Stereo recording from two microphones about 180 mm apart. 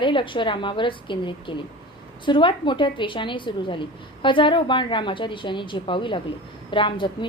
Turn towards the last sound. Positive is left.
turn(degrees=25)  # may be behind; listen again after turning